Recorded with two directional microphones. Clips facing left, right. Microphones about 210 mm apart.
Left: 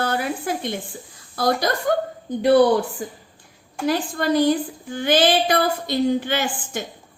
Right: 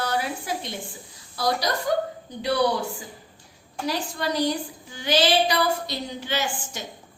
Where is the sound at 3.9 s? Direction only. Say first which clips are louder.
Left 7 dB; 55° left (ahead or behind).